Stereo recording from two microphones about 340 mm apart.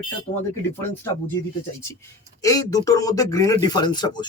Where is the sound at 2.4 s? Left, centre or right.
Centre.